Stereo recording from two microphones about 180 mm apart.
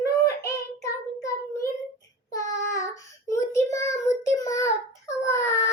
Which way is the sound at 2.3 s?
20° left (ahead or behind).